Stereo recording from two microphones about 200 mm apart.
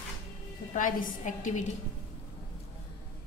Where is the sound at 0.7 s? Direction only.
40° left (ahead or behind).